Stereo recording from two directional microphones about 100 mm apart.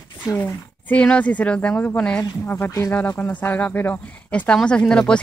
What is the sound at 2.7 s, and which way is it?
Speech, 30° left (ahead or behind).